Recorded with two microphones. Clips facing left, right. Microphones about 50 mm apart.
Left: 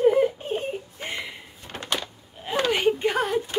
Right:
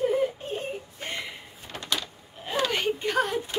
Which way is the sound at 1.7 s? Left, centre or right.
Left.